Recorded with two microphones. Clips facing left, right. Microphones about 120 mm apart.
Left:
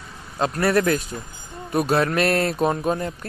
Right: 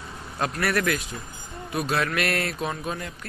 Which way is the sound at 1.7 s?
40° left (ahead or behind).